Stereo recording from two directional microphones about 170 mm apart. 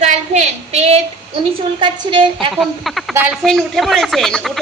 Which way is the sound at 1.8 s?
30° right (ahead or behind).